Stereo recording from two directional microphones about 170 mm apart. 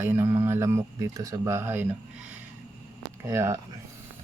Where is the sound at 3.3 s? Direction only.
20° right (ahead or behind).